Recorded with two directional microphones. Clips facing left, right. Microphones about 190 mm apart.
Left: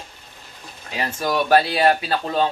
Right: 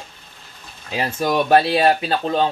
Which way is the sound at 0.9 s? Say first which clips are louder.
Right 3 dB; 25° right (ahead or behind).